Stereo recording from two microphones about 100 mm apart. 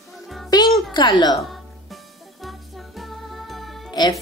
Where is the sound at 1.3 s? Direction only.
Centre (ahead or behind).